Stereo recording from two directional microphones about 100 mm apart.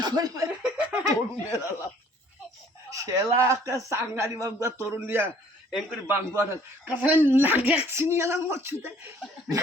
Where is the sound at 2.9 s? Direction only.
35° right (ahead or behind).